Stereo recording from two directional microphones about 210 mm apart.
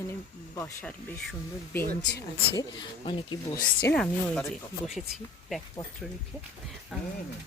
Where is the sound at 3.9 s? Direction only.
5° left (ahead or behind).